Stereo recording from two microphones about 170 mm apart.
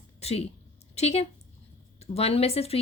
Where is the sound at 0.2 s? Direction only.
35° left (ahead or behind).